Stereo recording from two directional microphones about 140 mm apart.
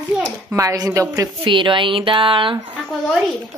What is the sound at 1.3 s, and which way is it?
Speech, 35° right (ahead or behind).